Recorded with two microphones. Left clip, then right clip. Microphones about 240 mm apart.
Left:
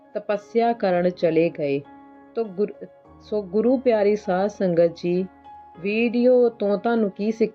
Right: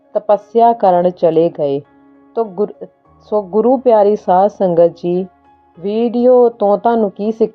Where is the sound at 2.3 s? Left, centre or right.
Right.